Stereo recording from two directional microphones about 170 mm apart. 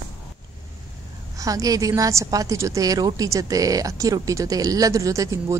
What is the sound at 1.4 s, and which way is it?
A woman's voice, 20° right (ahead or behind).